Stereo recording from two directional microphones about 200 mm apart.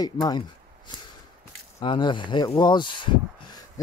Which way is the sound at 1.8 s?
25° left (ahead or behind).